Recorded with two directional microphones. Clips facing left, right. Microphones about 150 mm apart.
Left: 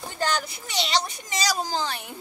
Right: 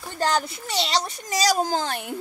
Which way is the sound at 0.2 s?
35° right (ahead or behind).